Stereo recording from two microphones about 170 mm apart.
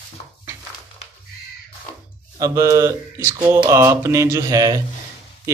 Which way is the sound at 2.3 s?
20° right (ahead or behind).